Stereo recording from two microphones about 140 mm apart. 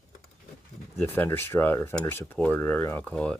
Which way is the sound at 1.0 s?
15° left (ahead or behind).